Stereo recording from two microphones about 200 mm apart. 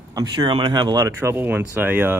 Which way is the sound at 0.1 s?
20° right (ahead or behind).